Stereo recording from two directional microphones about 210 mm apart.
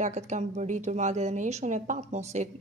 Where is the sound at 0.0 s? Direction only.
35° right (ahead or behind).